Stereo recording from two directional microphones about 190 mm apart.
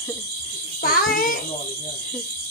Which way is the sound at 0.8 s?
50° left (ahead or behind).